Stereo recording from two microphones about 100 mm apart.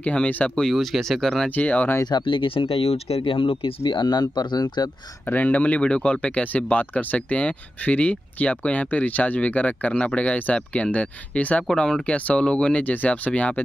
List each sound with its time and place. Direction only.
0.0 s speech: 10° left (ahead or behind)
0.7 s speech: centre (ahead or behind)
1.5 s speech: 15° left (ahead or behind)
2.0 s speech: 50° left (ahead or behind)
5.2 s speech: 20° left (ahead or behind)